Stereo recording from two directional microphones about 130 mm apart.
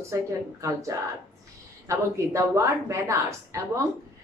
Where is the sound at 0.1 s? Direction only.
25° right (ahead or behind).